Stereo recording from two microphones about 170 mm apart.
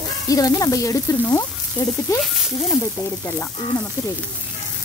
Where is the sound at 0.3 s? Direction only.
20° left (ahead or behind).